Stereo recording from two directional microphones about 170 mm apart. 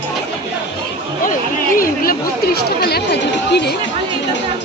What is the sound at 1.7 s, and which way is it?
Speech, 60° left (ahead or behind).